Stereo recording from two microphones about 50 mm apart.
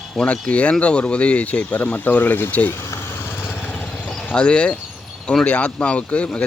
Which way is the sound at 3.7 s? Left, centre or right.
Left.